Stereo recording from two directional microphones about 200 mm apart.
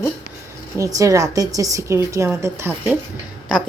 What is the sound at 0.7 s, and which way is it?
A woman's voice, 15° right (ahead or behind).